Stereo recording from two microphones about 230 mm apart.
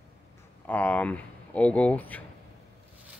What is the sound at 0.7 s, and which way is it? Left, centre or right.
Speech, centre.